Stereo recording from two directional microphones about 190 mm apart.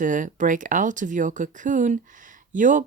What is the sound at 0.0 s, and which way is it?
Speech, 45° right (ahead or behind).